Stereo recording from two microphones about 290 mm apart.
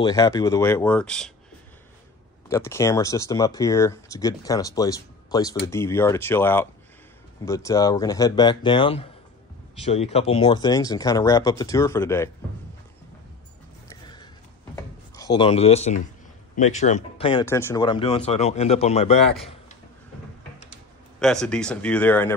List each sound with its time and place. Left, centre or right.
0.0 s speech: centre
2.5 s speech: centre
14.0 s a sound: centre
15.1 s speech: centre
21.2 s speech: centre